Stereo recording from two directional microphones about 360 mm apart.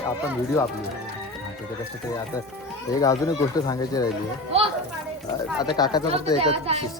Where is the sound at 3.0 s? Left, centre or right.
Centre.